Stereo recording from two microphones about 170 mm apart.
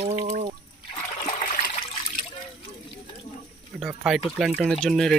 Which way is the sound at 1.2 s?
50° left (ahead or behind).